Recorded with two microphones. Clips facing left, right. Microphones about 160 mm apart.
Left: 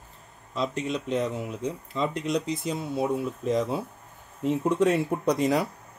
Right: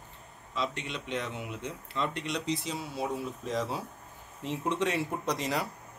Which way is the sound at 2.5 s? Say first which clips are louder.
Left 3 dB; 50° left (ahead or behind).